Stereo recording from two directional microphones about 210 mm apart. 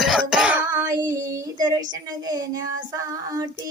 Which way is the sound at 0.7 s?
15° right (ahead or behind).